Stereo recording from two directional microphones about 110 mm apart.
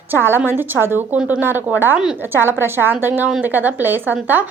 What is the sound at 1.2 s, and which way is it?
Speech, 5° right (ahead or behind).